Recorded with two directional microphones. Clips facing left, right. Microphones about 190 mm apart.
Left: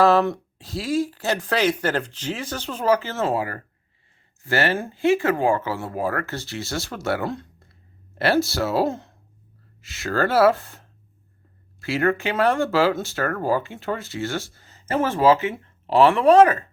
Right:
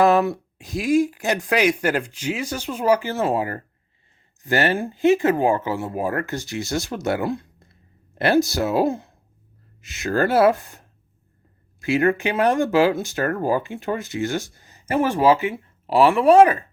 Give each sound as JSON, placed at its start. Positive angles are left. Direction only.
{"t": 0.0, "sound": "speech", "side_deg": -15}